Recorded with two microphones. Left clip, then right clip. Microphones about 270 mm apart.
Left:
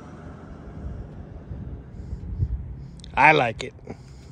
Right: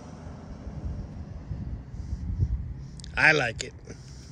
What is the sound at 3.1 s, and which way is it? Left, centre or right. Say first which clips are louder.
Speech: left 5 dB; centre.